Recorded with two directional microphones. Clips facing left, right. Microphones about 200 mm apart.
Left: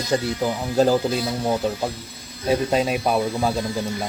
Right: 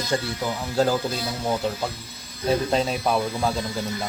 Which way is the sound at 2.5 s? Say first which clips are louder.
Left 2 dB; 10° left (ahead or behind).